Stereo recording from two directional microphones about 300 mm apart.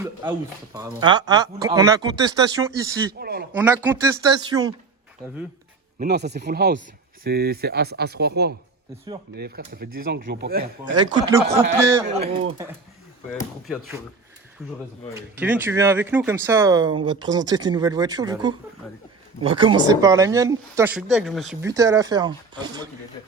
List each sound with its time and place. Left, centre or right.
0.0 s speech: centre
3.2 s a man's voice: right
3.5 s speech: centre
6.0 s speech: right
10.9 s speech: centre
13.7 s speech: centre